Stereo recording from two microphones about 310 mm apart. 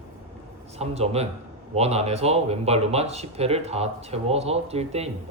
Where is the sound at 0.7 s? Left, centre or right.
Centre.